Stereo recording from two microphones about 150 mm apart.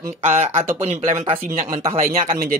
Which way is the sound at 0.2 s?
45° right (ahead or behind).